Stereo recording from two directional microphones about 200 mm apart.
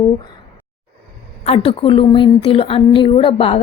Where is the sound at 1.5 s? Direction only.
30° left (ahead or behind).